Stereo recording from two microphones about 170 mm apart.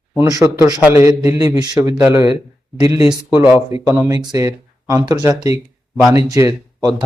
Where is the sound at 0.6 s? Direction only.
20° right (ahead or behind).